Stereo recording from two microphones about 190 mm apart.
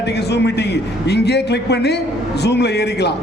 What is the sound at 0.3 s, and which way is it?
A man's voice, 60° left (ahead or behind).